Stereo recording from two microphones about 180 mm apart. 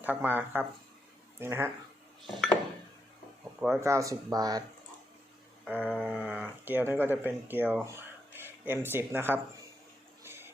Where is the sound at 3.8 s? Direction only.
15° right (ahead or behind).